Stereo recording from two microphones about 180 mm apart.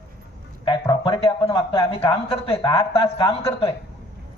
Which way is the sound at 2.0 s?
30° left (ahead or behind).